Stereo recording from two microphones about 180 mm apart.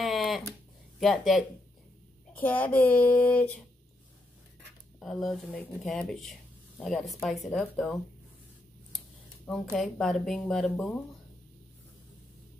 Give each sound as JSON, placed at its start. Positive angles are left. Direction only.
{"t": 0.0, "sound": "a sound", "side_deg": 0}
{"t": 0.9, "sound": "speech", "side_deg": 0}
{"t": 5.0, "sound": "speech", "side_deg": 0}
{"t": 9.5, "sound": "speech", "side_deg": 0}